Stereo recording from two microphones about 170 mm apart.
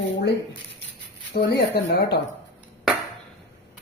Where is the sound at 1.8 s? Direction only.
70° left (ahead or behind).